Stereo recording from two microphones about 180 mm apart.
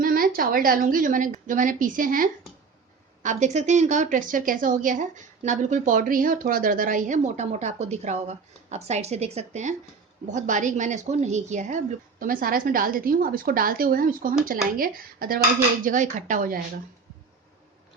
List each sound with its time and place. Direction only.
0.0 s a woman's voice: 50° right (ahead or behind)